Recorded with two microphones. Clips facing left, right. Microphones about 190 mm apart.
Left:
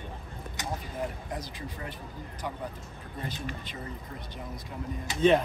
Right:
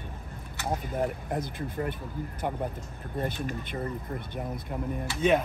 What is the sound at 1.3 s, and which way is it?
Speech, 55° right (ahead or behind).